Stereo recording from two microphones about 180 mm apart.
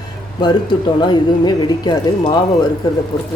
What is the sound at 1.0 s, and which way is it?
Speech, 25° left (ahead or behind).